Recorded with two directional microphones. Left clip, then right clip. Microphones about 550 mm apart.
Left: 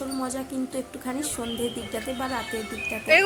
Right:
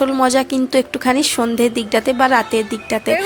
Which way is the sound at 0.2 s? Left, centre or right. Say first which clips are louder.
Right 16 dB; centre.